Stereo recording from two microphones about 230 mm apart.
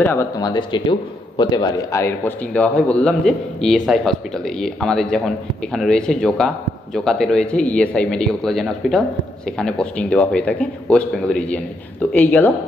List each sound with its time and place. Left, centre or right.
0.0 s speech: centre